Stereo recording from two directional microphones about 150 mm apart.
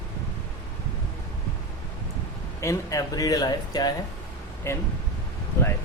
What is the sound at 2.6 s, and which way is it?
Speech, 20° left (ahead or behind).